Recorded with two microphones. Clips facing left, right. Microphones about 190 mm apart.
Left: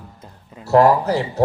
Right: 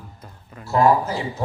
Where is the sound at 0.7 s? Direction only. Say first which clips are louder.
Left 4 dB; 75° left (ahead or behind).